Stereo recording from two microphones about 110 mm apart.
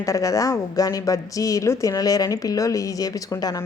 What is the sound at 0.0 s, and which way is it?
A woman's voice, 30° left (ahead or behind).